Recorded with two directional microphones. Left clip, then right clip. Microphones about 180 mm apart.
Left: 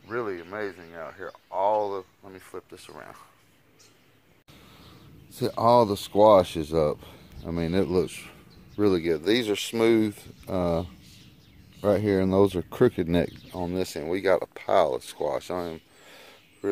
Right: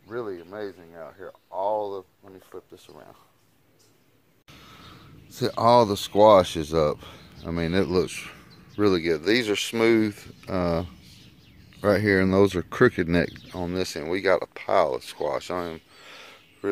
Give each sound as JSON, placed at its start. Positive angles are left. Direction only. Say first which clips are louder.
{"t": 0.1, "sound": "speech", "louder": "left 2 dB", "side_deg": 20}
{"t": 4.5, "sound": "speech", "louder": "right 5 dB", "side_deg": 5}
{"t": 15.1, "sound": "a sound", "louder": "right 1 dB", "side_deg": 5}